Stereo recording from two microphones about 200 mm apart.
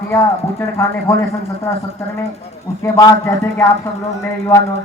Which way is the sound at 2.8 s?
15° left (ahead or behind).